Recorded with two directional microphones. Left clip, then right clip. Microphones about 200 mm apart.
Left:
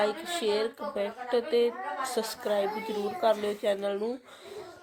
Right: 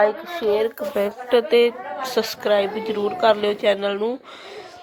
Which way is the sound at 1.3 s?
25° right (ahead or behind).